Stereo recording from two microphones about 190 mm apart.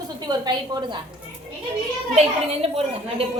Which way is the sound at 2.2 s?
30° right (ahead or behind).